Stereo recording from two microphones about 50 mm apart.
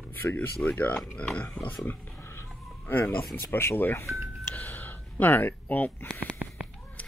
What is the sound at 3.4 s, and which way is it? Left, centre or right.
Speech, left.